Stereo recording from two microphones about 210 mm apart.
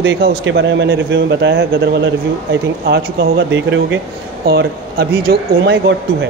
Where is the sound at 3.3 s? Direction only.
60° right (ahead or behind).